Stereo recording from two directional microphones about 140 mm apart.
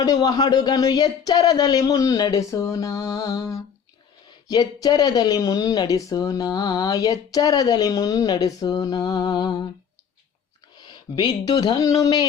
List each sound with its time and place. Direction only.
0.0 s speech: 25° left (ahead or behind)
10.8 s speech: 30° left (ahead or behind)